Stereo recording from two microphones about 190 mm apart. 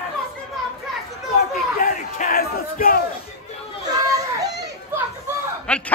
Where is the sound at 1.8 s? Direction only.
50° left (ahead or behind).